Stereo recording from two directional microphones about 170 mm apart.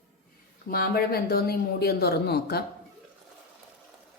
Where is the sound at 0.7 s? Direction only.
60° left (ahead or behind).